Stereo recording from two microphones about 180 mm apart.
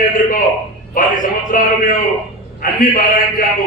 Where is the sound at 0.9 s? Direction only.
50° left (ahead or behind).